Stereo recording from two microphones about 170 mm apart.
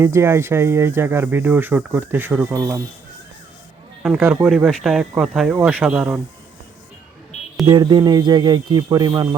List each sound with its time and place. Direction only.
0.0 s speech: 15° right (ahead or behind)
4.0 s speech: 10° right (ahead or behind)
7.7 s speech: 25° right (ahead or behind)